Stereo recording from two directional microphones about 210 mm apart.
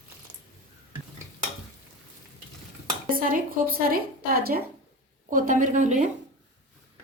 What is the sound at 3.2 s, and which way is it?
A woman's voice, 45° right (ahead or behind).